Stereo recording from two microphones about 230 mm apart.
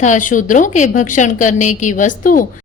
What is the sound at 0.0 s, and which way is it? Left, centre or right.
A woman's voice, left.